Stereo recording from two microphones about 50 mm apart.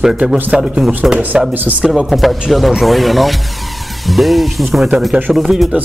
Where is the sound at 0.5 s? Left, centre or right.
Centre.